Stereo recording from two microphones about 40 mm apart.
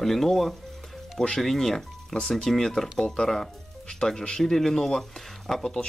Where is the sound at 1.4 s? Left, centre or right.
Centre.